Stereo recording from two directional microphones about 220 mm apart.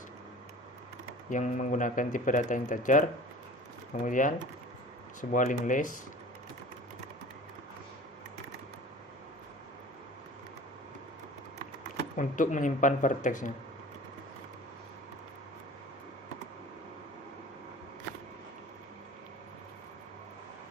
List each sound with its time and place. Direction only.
1.3 s speech: 35° left (ahead or behind)
4.0 s speech: 35° left (ahead or behind)
12.1 s speech: 35° left (ahead or behind)